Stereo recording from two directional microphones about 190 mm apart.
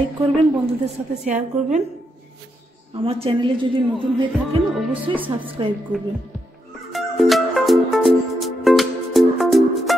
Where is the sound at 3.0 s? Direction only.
30° right (ahead or behind).